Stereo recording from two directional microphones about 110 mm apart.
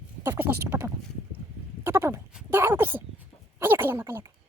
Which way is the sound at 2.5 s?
20° right (ahead or behind).